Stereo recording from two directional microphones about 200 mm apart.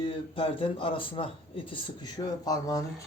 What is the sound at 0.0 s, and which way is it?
Speech, 25° left (ahead or behind).